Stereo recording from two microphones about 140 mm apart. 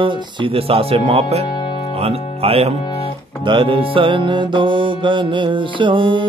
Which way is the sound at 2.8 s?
40° left (ahead or behind).